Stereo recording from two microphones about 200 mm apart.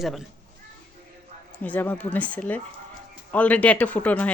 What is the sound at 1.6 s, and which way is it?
Speech, 10° left (ahead or behind).